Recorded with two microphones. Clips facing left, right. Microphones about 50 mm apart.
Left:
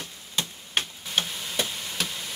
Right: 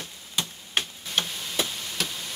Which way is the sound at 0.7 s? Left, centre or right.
Centre.